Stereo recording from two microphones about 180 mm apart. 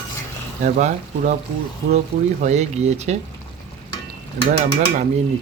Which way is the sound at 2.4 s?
40° right (ahead or behind).